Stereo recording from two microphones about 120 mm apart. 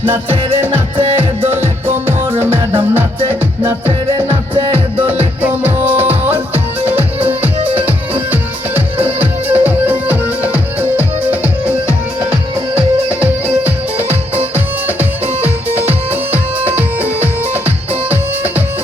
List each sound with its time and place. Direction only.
1.5 s music: 20° right (ahead or behind)
14.3 s music: 15° right (ahead or behind)
17.0 s music: 15° right (ahead or behind)